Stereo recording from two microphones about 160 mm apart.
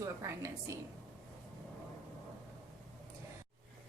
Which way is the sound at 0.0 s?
20° right (ahead or behind).